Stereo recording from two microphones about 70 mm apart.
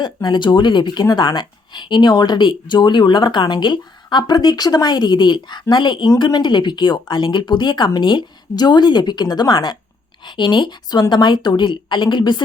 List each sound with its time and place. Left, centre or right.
0.0 s speech: left